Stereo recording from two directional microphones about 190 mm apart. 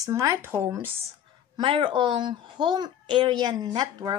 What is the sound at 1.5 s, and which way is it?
A woman's voice, 25° right (ahead or behind).